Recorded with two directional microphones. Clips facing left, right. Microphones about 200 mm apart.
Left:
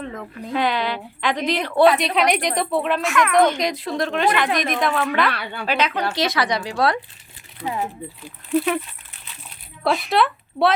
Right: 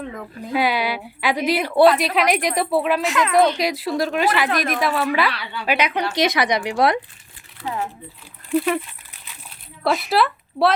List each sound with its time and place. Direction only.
0.0 s a woman's voice: 5° right (ahead or behind)
3.0 s speech: 20° right (ahead or behind)
3.6 s a woman's voice: 5° right (ahead or behind)
5.3 s a woman's voice: 50° left (ahead or behind)
5.6 s a woman's voice: 10° right (ahead or behind)
7.6 s speech: 15° left (ahead or behind)
8.4 s a woman's voice: centre (ahead or behind)
9.8 s speech: 5° right (ahead or behind)